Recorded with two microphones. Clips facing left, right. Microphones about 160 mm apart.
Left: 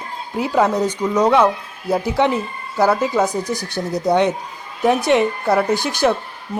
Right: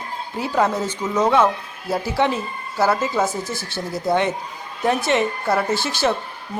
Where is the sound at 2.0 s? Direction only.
20° left (ahead or behind).